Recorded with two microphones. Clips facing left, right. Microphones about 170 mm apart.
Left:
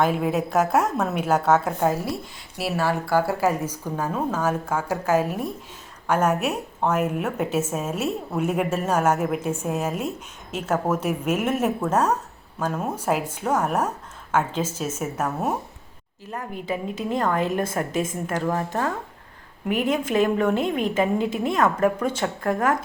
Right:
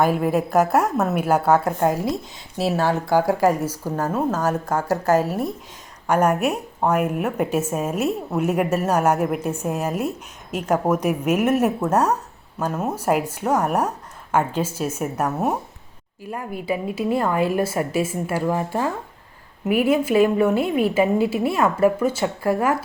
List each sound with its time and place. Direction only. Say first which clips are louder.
0.0 s a woman's voice: right 3 dB; 5° right (ahead or behind)
2.6 s a woman's voice: right 4 dB; 25° right (ahead or behind)
4.7 s a woman's voice: right 5 dB; 10° left (ahead or behind)
6.1 s a woman's voice: right 3 dB; 10° right (ahead or behind)